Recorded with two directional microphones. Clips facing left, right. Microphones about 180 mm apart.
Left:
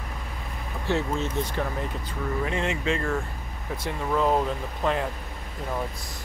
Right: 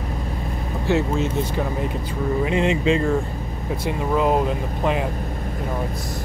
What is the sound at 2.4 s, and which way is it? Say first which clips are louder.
Speech: right 8 dB; 20° right (ahead or behind).